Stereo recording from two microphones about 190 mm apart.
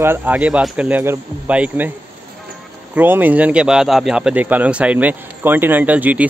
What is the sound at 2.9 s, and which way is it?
Speech, 10° right (ahead or behind).